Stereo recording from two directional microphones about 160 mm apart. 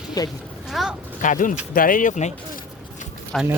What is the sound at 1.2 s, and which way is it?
Speech, 55° left (ahead or behind).